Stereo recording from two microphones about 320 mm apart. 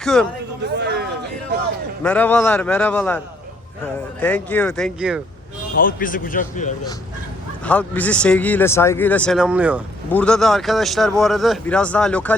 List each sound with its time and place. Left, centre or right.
0.0 s a man's voice: centre
0.8 s a sound: right
2.0 s speech: centre
4.2 s speech: centre
5.7 s speech: left
7.6 s speech: centre